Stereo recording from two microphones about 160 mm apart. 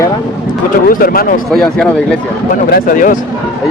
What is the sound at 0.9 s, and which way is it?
Speech, 65° left (ahead or behind).